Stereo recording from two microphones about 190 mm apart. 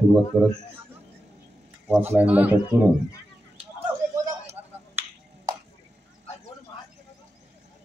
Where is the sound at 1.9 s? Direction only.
10° right (ahead or behind).